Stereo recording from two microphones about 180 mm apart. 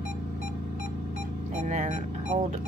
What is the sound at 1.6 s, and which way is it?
Music, 45° right (ahead or behind).